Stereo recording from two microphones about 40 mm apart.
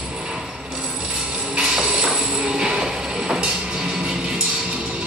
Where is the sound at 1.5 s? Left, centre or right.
Right.